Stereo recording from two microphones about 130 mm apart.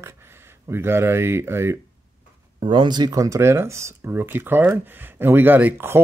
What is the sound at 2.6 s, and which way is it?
Speech, 40° right (ahead or behind).